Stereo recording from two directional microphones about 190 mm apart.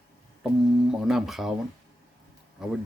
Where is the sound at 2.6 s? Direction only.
Centre (ahead or behind).